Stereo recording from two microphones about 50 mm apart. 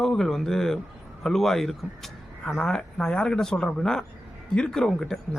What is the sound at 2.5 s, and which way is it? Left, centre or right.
A man's voice, centre.